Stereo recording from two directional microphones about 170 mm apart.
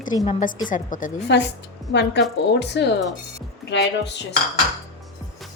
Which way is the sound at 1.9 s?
85° left.